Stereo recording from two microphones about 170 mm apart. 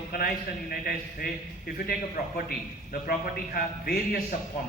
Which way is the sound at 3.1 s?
60° left (ahead or behind).